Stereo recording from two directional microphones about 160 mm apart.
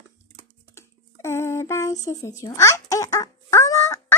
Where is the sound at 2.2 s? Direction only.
20° left (ahead or behind).